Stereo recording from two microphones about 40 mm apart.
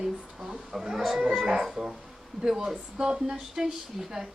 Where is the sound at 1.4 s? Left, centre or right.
Right.